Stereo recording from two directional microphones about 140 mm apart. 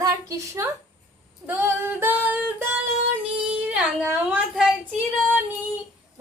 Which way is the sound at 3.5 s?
10° right (ahead or behind).